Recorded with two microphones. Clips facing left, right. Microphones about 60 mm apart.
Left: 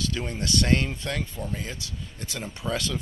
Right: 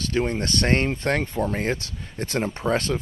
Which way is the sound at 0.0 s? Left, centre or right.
Right.